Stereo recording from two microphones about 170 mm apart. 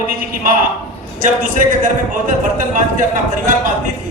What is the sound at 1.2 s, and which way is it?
Speech, 50° right (ahead or behind).